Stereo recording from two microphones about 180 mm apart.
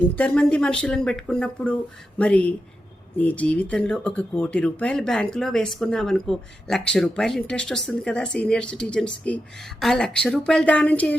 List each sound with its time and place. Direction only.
0.2 s speech: 5° left (ahead or behind)